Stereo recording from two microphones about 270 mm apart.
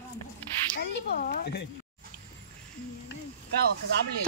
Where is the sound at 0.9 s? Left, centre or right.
Left.